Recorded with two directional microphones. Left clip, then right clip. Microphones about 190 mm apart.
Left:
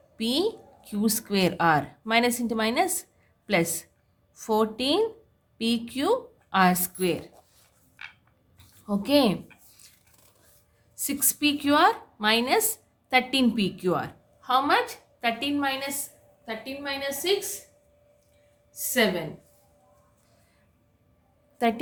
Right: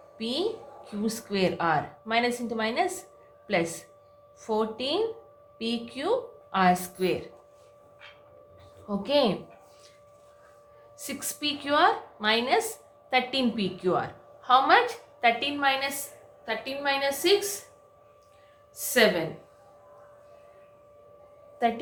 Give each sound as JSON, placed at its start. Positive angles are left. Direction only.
{"t": 0.2, "sound": "a woman's voice", "side_deg": 55}
{"t": 8.9, "sound": "a woman's voice", "side_deg": 50}
{"t": 10.9, "sound": "a woman's voice", "side_deg": 50}
{"t": 21.6, "sound": "a woman's voice", "side_deg": 55}